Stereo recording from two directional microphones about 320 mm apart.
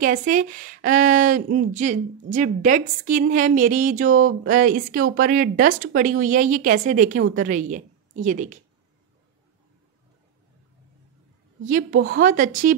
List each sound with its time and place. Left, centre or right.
0.0 s a woman's voice: right
11.6 s a woman's voice: right